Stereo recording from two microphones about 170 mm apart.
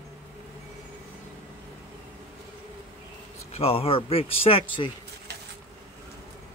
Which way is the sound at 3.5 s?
35° left (ahead or behind).